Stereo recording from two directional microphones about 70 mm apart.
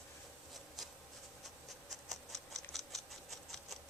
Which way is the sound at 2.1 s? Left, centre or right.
Centre.